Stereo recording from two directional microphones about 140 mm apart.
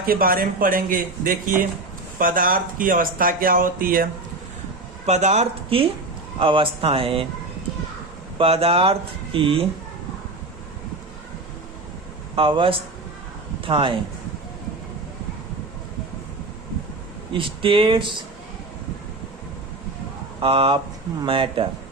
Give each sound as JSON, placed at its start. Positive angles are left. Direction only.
{"t": 0.0, "sound": "speech", "side_deg": -90}
{"t": 5.0, "sound": "speech", "side_deg": -50}
{"t": 8.4, "sound": "speech", "side_deg": -45}
{"t": 12.4, "sound": "speech", "side_deg": -40}
{"t": 17.3, "sound": "speech", "side_deg": -40}
{"t": 20.4, "sound": "speech", "side_deg": -40}